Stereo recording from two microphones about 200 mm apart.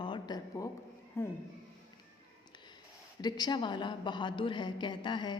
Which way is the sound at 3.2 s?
20° left (ahead or behind).